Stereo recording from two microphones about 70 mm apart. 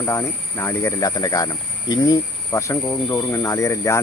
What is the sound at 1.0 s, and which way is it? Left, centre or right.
Speech, left.